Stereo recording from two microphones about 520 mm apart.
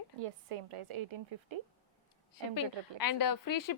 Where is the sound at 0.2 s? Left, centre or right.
Right.